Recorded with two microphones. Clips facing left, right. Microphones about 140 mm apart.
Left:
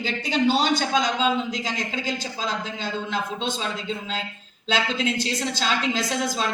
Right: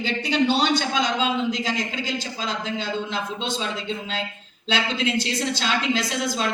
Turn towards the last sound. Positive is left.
turn(degrees=45)  # may be behind; listen again after turning